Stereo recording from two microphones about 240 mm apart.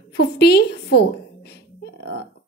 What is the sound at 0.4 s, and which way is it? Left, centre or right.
Speech, left.